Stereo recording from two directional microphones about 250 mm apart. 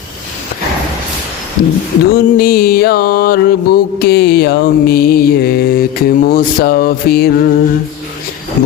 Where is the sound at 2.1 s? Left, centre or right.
Left.